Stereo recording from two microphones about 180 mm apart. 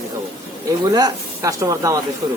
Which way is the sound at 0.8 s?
20° right (ahead or behind).